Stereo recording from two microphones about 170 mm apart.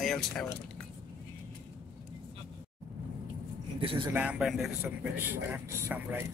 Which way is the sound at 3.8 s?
30° right (ahead or behind).